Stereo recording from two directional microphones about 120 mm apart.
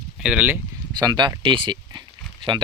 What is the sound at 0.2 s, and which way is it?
Speech, 10° right (ahead or behind).